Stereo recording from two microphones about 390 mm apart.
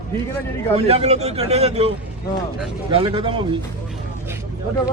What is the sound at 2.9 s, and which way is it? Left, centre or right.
Speech, centre.